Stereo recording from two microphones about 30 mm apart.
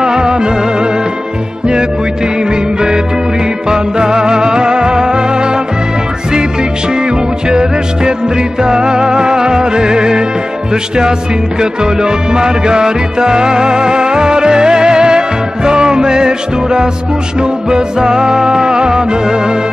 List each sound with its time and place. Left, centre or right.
0.0 s music: right
3.6 s music: right
6.9 s music: right